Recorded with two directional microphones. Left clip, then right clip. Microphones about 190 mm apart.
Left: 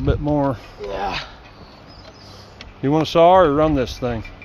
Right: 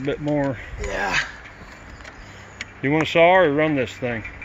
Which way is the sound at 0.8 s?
60° right (ahead or behind).